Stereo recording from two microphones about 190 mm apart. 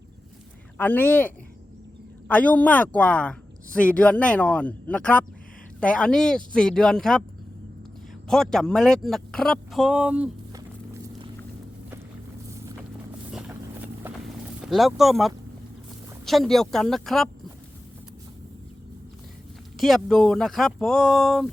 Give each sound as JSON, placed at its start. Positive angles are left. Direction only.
{"t": 0.8, "sound": "a woman's voice", "side_deg": 10}
{"t": 8.3, "sound": "speech", "side_deg": 0}
{"t": 10.5, "sound": "a sound", "side_deg": -20}
{"t": 13.5, "sound": "clip-clop", "side_deg": -10}
{"t": 14.6, "sound": "speech", "side_deg": 0}
{"t": 19.8, "sound": "speech", "side_deg": 0}